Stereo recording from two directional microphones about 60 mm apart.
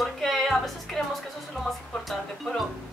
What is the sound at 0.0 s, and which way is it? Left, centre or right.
Music, centre.